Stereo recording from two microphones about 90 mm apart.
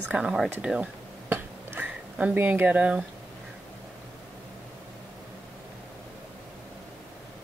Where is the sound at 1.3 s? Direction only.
20° right (ahead or behind).